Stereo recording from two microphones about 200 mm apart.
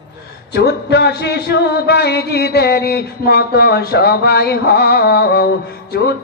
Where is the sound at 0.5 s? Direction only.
55° left (ahead or behind).